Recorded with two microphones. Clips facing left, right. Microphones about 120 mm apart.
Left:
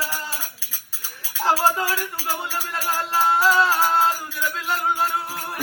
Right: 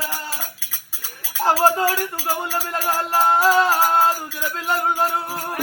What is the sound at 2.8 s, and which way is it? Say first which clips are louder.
Music: right 2 dB; 40° right (ahead or behind).